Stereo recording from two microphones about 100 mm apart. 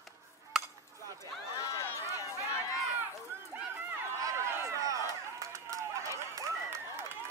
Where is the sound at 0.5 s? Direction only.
5° right (ahead or behind).